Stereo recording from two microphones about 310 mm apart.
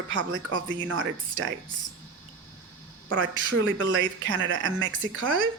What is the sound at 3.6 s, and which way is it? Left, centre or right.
A woman's voice, right.